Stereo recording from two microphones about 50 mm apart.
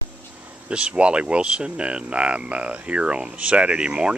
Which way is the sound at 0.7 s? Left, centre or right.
Right.